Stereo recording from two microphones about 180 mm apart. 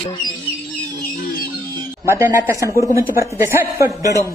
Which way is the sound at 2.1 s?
10° right (ahead or behind).